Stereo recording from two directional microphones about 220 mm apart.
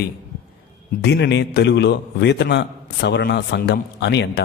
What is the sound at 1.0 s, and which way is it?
A man's voice, 50° left (ahead or behind).